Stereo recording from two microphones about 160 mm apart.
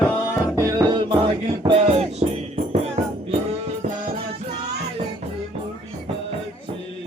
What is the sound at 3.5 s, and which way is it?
Music, 55° right (ahead or behind).